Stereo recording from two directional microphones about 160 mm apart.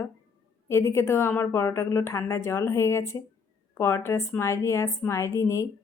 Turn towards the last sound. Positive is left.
turn(degrees=20)  # may be behind; listen again after turning